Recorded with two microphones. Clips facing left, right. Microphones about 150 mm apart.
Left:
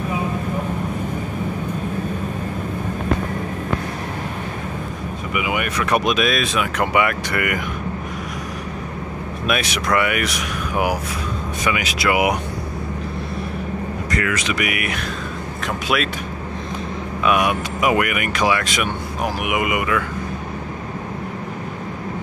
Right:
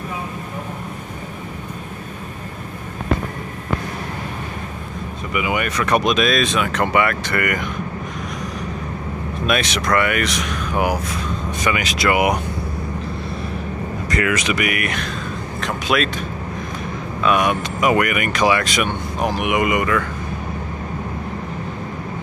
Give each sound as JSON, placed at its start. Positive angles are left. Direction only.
{"t": 5.3, "sound": "speech", "side_deg": 5}
{"t": 9.5, "sound": "speech", "side_deg": 10}
{"t": 14.1, "sound": "speech", "side_deg": -20}
{"t": 14.5, "sound": "speech", "side_deg": 5}
{"t": 17.2, "sound": "speech", "side_deg": 10}